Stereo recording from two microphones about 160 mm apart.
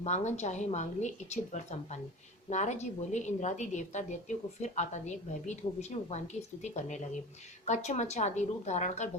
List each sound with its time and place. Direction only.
0.0 s a woman's voice: 45° left (ahead or behind)